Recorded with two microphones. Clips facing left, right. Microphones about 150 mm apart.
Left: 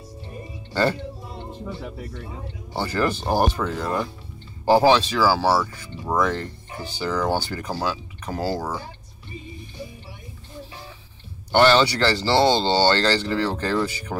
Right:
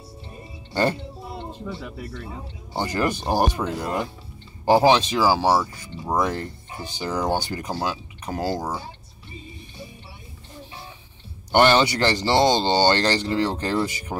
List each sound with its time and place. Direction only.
0.7 s music: 15° right (ahead or behind)
1.7 s speech: 75° right (ahead or behind)
2.7 s speech: 15° right (ahead or behind)
11.5 s speech: 15° right (ahead or behind)